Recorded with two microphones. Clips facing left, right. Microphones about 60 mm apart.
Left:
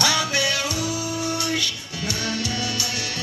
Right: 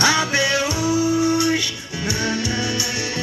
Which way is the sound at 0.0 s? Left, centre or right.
Right.